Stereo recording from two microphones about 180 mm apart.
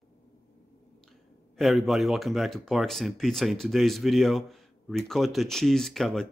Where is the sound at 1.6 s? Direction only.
Centre (ahead or behind).